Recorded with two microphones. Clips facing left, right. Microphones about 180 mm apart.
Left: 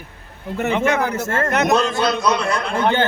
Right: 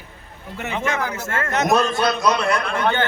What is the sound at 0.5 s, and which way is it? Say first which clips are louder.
Speech: left 6 dB; 45° left (ahead or behind).